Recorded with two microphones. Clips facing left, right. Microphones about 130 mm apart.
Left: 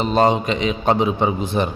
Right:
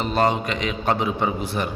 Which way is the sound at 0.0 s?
20° left (ahead or behind).